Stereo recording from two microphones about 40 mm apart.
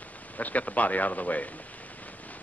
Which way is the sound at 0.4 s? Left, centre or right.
Left.